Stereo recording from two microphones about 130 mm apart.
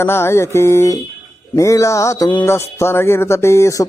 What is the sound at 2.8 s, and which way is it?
Music, 20° left (ahead or behind).